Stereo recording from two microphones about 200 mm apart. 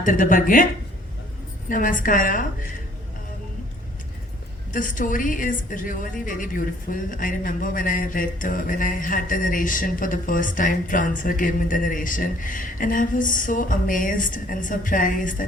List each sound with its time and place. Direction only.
0.0 s a woman's voice: 40° left (ahead or behind)
1.7 s a woman's voice: 40° left (ahead or behind)
4.7 s a woman's voice: 40° left (ahead or behind)